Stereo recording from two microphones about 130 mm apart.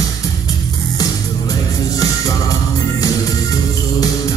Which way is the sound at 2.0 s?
25° left (ahead or behind).